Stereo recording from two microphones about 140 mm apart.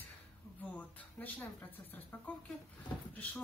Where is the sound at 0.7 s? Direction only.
10° left (ahead or behind).